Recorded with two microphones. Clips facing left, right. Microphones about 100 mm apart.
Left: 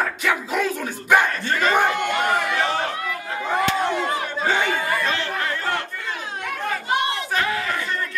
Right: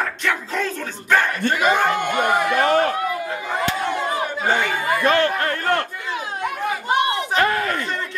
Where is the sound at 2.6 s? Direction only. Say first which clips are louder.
Right 6 dB; 50° right (ahead or behind).